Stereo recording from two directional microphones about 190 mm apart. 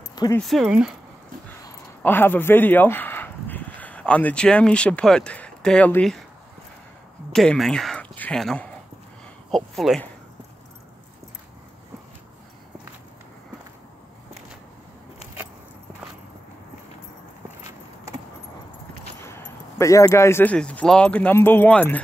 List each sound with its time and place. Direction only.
0.1 s a sound: 20° left (ahead or behind)
0.4 s speech: centre (ahead or behind)
2.0 s speech: 10° left (ahead or behind)
7.3 s speech: centre (ahead or behind)
19.2 s speech: 15° left (ahead or behind)